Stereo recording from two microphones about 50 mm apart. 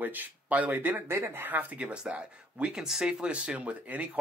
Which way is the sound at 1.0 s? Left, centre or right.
Right.